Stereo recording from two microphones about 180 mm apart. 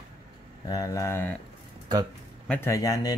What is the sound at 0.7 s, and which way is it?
Mantra, 20° left (ahead or behind).